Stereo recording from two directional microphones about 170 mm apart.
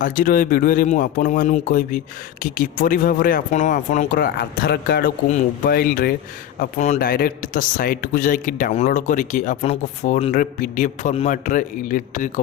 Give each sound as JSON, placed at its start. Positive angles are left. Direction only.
{"t": 0.0, "sound": "a man's voice", "side_deg": 55}
{"t": 6.6, "sound": "a man's voice", "side_deg": 45}
{"t": 7.1, "sound": "a man's voice", "side_deg": 60}